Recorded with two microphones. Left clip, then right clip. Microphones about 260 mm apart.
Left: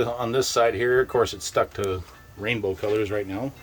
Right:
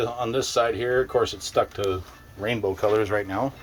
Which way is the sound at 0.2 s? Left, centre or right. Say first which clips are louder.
Left 1 dB; centre.